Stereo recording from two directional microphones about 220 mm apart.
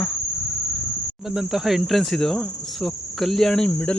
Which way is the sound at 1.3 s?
Centre (ahead or behind).